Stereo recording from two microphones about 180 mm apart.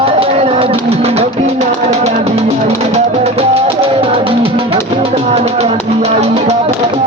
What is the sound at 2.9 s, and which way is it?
Music, 35° right (ahead or behind).